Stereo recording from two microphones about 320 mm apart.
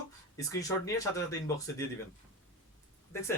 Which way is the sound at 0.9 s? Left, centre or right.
Centre.